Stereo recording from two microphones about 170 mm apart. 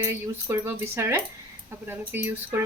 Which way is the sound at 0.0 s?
15° right (ahead or behind).